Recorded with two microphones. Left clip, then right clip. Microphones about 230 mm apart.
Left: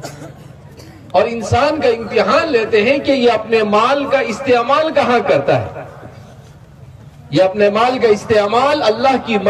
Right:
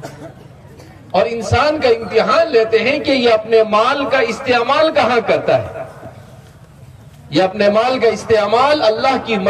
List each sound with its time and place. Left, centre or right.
1.1 s a man's voice: right
7.2 s a man's voice: right